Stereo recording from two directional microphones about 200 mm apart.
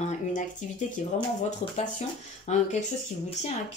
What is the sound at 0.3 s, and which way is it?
Speech, 40° left (ahead or behind).